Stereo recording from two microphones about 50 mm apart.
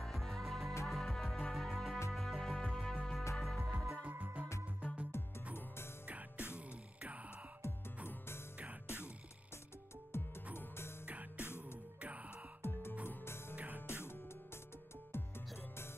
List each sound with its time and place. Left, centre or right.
0.0 s music: centre
4.1 s music: right
5.1 s music: left
6.0 s music: right
7.6 s music: left
8.8 s music: left
10.1 s music: left
12.0 s music: right
13.0 s music: left
13.6 s music: right
13.8 s music: left